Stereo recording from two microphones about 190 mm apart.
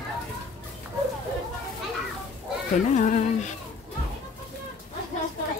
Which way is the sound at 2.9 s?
40° left (ahead or behind).